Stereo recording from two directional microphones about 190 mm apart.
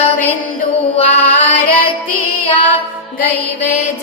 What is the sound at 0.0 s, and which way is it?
Mantra, 10° left (ahead or behind).